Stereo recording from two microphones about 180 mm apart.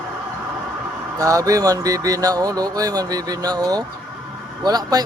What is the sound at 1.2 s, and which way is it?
Speech, 20° right (ahead or behind).